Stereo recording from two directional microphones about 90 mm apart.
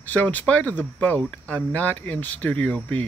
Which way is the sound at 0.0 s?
20° left (ahead or behind).